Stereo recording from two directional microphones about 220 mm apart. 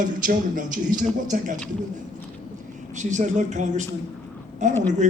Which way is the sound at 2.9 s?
35° right (ahead or behind).